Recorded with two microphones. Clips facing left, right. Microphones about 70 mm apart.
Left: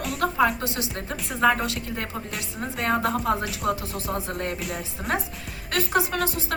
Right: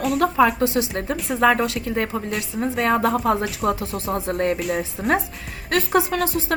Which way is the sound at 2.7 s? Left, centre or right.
Right.